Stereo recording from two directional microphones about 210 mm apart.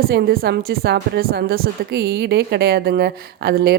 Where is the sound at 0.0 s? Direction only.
50° right (ahead or behind).